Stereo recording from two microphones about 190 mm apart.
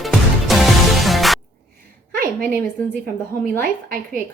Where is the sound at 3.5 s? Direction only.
50° right (ahead or behind).